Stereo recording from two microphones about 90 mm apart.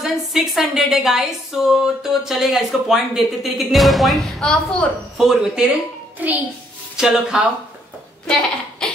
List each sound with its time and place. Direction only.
0.0 s speech: 5° right (ahead or behind)
5.1 s speech: 5° right (ahead or behind)
6.1 s a child's voice: 20° right (ahead or behind)
7.0 s speech: 5° right (ahead or behind)
8.3 s a sound: 10° left (ahead or behind)